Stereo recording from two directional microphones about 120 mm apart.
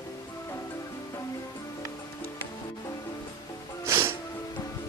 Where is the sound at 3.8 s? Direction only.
25° right (ahead or behind).